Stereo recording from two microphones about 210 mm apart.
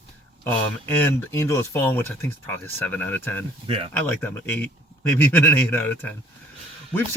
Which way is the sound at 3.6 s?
25° right (ahead or behind).